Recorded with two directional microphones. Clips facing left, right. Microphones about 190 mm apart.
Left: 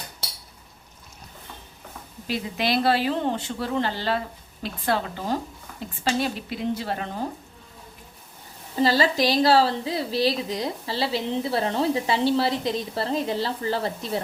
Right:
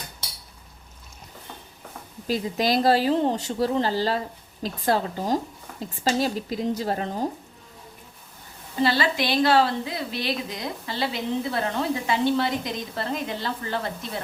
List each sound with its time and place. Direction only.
2.2 s speech: 40° right (ahead or behind)
8.8 s a woman's voice: 40° left (ahead or behind)